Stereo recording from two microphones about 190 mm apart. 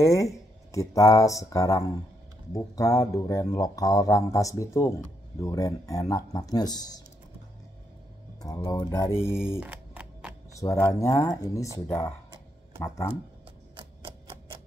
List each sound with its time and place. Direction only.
0.0 s speech: 15° left (ahead or behind)
8.5 s speech: 10° left (ahead or behind)
9.6 s a sound: 10° right (ahead or behind)
10.6 s speech: 15° left (ahead or behind)
12.8 s speech: 15° left (ahead or behind)